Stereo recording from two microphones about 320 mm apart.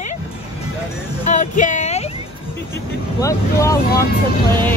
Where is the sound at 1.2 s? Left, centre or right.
Left.